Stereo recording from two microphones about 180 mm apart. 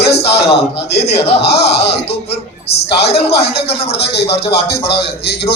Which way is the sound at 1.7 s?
65° left (ahead or behind).